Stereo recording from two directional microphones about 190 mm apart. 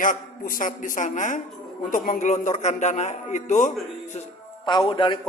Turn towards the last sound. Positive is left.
turn(degrees=25)  # may be behind; listen again after turning